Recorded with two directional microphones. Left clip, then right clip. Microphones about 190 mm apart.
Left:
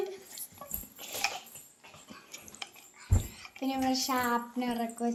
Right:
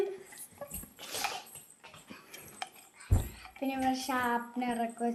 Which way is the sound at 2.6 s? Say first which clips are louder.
Right 2 dB; 30° right (ahead or behind).